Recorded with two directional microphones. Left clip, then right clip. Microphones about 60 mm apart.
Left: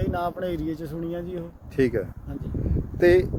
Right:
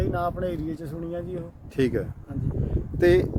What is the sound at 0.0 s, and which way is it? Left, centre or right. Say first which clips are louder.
Speech: even; right.